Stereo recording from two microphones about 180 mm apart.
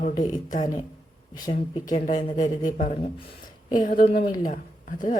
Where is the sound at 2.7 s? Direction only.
45° left (ahead or behind).